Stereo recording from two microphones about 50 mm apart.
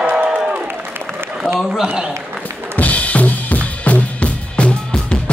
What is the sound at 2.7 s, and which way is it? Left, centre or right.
Drum kit, left.